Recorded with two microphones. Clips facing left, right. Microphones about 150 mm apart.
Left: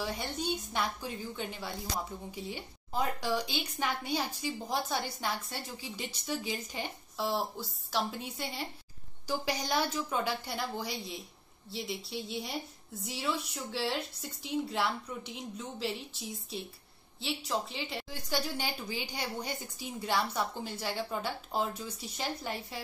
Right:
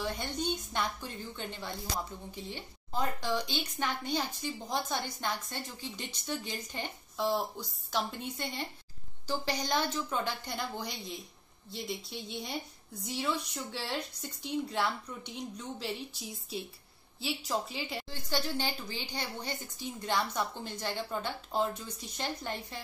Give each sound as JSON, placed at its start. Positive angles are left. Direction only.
{"t": 0.0, "sound": "a woman's voice", "side_deg": 5}
{"t": 18.1, "sound": "a woman's voice", "side_deg": 10}